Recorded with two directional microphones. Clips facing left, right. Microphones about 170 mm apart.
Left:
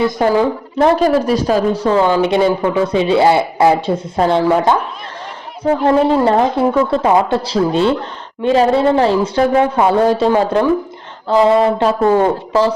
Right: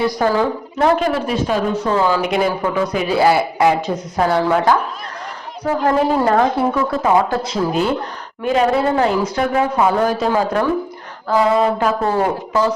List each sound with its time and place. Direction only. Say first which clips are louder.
0.0 s a woman's voice: left 3 dB; 20° left (ahead or behind)
5.8 s speech: left 3 dB; 25° left (ahead or behind)